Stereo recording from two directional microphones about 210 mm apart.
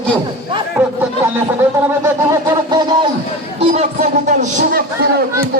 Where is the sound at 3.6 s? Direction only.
30° right (ahead or behind).